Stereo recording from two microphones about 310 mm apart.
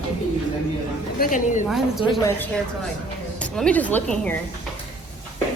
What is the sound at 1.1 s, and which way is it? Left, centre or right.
Speech, left.